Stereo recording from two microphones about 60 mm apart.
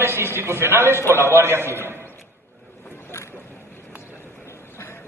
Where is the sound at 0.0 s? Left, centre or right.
Right.